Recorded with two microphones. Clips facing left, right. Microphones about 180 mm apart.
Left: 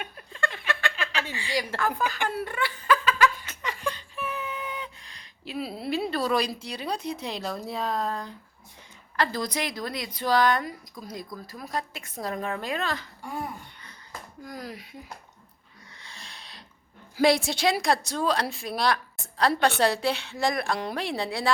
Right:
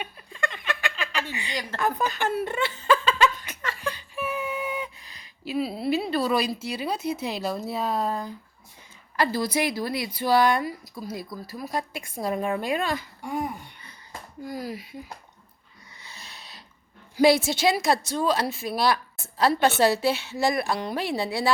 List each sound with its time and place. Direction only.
0.7 s a sound: 15° right (ahead or behind)
1.3 s a woman's voice: 20° right (ahead or behind)
2.4 s laughter: 25° right (ahead or behind)
3.8 s speech: 10° right (ahead or behind)
14.4 s a woman's voice: 5° right (ahead or behind)
16.0 s a sound: 5° right (ahead or behind)
17.2 s a woman's voice: centre (ahead or behind)